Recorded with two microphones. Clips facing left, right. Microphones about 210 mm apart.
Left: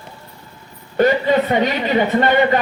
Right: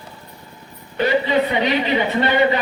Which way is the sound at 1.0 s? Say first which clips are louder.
Left 3 dB; 45° left (ahead or behind).